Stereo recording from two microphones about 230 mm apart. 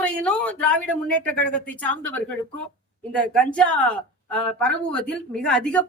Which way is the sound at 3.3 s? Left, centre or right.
Centre.